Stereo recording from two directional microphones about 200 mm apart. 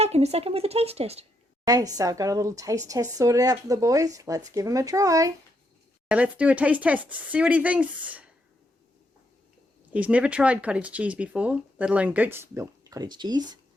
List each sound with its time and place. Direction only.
0.0 s speech: 30° right (ahead or behind)
1.6 s a woman's voice: 20° right (ahead or behind)
6.1 s speech: 5° right (ahead or behind)
9.9 s speech: 5° right (ahead or behind)